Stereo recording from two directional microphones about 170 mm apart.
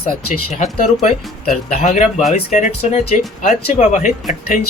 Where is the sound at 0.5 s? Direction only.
45° left (ahead or behind).